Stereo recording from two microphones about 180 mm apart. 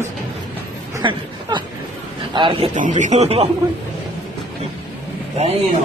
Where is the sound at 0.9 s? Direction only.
25° right (ahead or behind).